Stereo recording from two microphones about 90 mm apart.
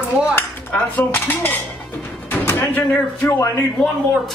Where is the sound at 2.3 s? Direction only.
25° left (ahead or behind).